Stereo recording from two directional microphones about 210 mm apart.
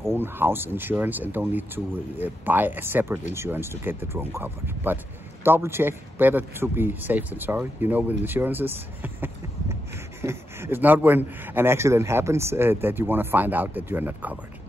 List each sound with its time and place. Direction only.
0.1 s speech: 10° right (ahead or behind)